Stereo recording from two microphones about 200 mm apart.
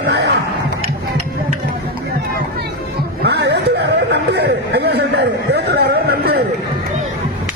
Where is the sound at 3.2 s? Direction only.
55° right (ahead or behind).